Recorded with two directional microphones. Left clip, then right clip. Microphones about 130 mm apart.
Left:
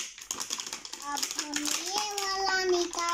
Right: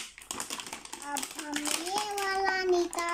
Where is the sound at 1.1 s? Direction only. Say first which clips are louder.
Left 2 dB; 10° right (ahead or behind).